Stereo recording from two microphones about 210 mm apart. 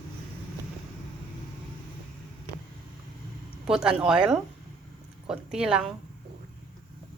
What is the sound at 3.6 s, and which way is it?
Speech, 5° right (ahead or behind).